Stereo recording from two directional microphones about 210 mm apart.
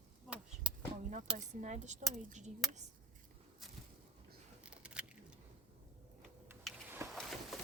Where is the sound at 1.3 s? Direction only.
35° right (ahead or behind).